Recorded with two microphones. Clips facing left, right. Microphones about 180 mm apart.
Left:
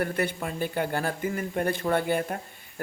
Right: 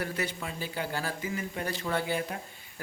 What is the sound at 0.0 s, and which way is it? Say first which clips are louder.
Speech: left 6 dB; 55° left (ahead or behind).